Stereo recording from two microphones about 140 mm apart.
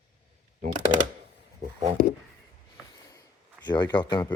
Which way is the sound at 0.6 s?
65° right (ahead or behind).